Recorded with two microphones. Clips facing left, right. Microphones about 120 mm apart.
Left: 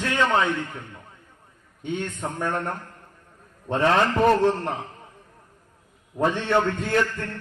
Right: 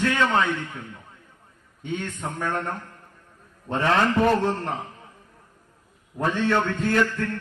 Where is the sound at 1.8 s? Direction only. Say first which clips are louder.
Left 1 dB; 15° left (ahead or behind).